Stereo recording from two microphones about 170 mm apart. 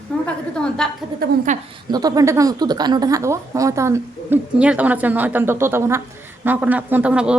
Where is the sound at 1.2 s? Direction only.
65° right (ahead or behind).